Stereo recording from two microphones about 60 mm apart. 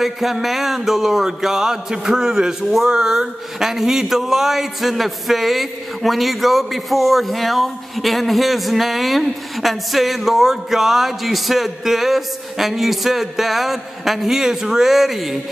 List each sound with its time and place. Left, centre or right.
0.0 s mantra: centre